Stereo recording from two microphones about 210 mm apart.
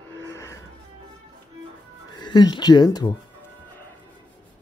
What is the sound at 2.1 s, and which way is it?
Speech, 20° left (ahead or behind).